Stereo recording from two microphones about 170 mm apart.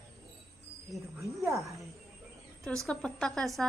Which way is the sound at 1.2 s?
20° right (ahead or behind).